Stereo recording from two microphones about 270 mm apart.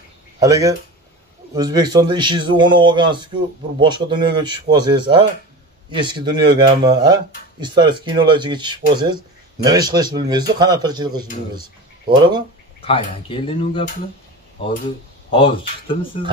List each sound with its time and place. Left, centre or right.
0.4 s a man's voice: centre
12.8 s speech: centre
15.3 s speech: centre